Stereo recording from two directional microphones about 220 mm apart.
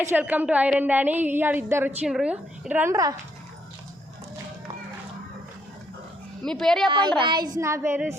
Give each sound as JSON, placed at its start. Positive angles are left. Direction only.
{"t": 0.0, "sound": "a woman's voice", "side_deg": -10}
{"t": 6.4, "sound": "speech", "side_deg": 0}
{"t": 7.2, "sound": "a woman's voice", "side_deg": -20}